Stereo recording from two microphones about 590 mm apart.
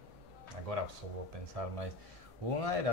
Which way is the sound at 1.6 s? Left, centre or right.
Right.